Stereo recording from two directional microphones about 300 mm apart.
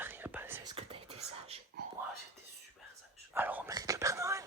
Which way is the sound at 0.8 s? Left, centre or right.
Centre.